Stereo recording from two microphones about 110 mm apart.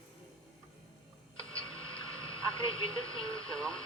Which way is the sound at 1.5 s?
55° left (ahead or behind).